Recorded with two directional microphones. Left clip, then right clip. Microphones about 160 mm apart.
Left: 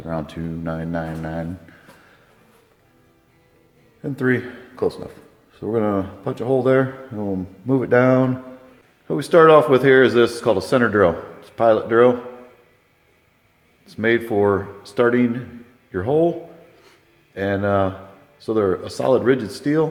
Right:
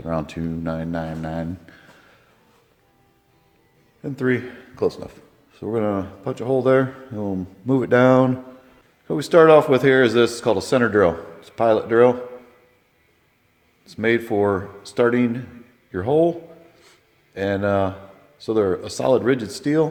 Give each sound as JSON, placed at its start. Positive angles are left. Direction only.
{"t": 0.0, "sound": "speech", "side_deg": -60}
{"t": 4.0, "sound": "speech", "side_deg": -10}
{"t": 7.1, "sound": "speech", "side_deg": -30}
{"t": 13.8, "sound": "speech", "side_deg": -30}
{"t": 16.8, "sound": "a sound", "side_deg": -35}
{"t": 18.3, "sound": "speech", "side_deg": -30}